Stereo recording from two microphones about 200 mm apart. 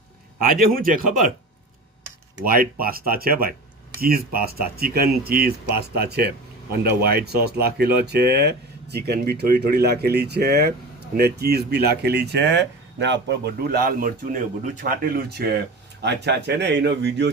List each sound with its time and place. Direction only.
0.6 s speech: 45° right (ahead or behind)
2.4 s speech: 45° right (ahead or behind)
14.6 s speech: 40° right (ahead or behind); by 17.3 s 60° right (ahead or behind)